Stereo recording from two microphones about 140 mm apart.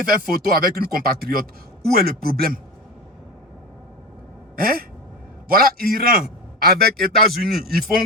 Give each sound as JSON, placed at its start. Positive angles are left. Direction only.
{"t": 0.3, "sound": "a man's voice", "side_deg": -90}
{"t": 4.5, "sound": "a man's voice", "side_deg": -90}